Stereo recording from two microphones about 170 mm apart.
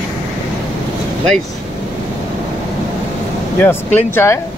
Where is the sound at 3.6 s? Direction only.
10° left (ahead or behind).